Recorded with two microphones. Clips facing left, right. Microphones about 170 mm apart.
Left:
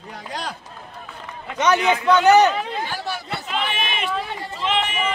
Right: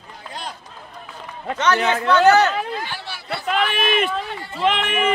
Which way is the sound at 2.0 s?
15° left (ahead or behind).